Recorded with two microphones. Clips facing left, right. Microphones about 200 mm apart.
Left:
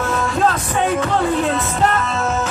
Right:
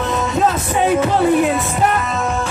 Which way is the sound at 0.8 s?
15° right (ahead or behind).